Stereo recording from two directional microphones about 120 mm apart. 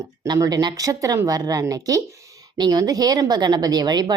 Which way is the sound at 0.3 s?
30° right (ahead or behind).